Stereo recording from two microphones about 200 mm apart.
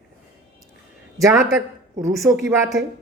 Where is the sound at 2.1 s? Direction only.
Centre (ahead or behind).